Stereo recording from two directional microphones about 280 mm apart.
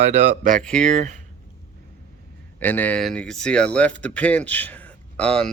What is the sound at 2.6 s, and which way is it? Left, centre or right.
Speech, centre.